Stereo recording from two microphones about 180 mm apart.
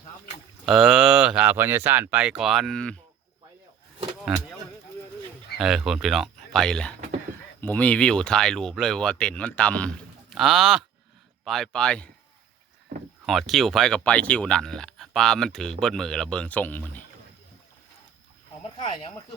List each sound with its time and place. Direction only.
0.6 s speech: centre (ahead or behind)
4.3 s speech: 5° right (ahead or behind)
5.5 s speech: centre (ahead or behind)
13.2 s speech: centre (ahead or behind)
18.6 s speech: 30° left (ahead or behind)